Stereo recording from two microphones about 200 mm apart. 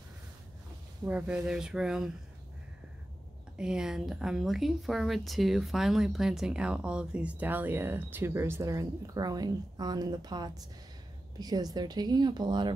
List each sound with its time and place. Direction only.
1.0 s speech: 5° right (ahead or behind)
3.5 s speech: 5° right (ahead or behind); by 12.7 s 20° right (ahead or behind)